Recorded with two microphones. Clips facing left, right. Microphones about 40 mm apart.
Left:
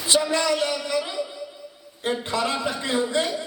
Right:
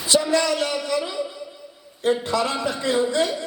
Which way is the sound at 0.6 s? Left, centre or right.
Right.